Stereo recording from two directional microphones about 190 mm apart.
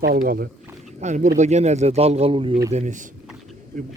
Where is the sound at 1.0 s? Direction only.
40° right (ahead or behind).